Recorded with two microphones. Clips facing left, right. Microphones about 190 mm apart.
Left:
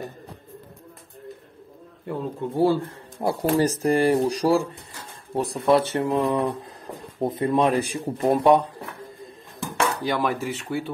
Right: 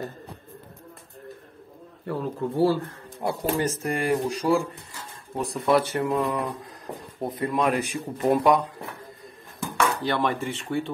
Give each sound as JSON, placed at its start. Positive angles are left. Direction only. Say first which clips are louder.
{"t": 2.0, "sound": "speech", "louder": "even", "side_deg": 20}
{"t": 3.2, "sound": "speech", "louder": "left 5 dB", "side_deg": 35}
{"t": 10.0, "sound": "speech", "louder": "left 1 dB", "side_deg": 10}